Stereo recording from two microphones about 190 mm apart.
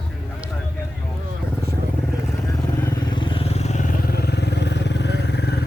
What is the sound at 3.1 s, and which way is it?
Vehicle, 25° left (ahead or behind).